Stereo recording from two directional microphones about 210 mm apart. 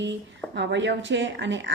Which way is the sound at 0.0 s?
55° right (ahead or behind).